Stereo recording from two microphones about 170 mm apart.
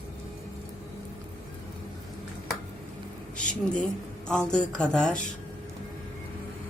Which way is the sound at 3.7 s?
5° left (ahead or behind).